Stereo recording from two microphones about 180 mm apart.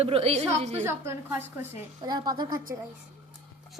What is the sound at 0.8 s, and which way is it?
A woman's voice, 15° right (ahead or behind).